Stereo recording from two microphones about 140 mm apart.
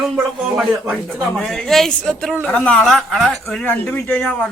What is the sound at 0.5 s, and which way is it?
Speech, 5° right (ahead or behind).